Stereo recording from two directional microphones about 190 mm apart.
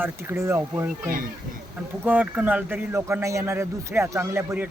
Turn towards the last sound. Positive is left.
turn(degrees=-10)  # may be behind; listen again after turning